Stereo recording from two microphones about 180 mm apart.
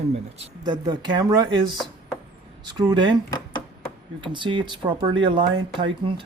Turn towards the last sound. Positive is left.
turn(degrees=-25)  # may be behind; listen again after turning